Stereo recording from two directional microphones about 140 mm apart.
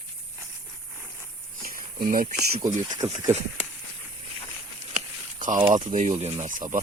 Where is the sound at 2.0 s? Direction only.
90° right.